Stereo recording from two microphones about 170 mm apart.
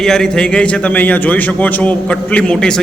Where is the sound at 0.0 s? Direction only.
5° left (ahead or behind).